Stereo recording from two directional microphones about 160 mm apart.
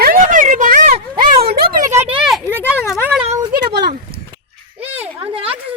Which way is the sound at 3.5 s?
90° right.